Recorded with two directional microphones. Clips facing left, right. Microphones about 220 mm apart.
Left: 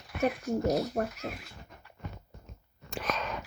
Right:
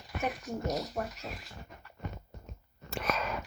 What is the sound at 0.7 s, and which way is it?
Speech, 50° left (ahead or behind).